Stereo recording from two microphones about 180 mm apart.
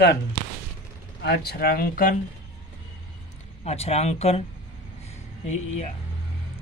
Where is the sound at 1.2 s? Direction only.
65° left (ahead or behind).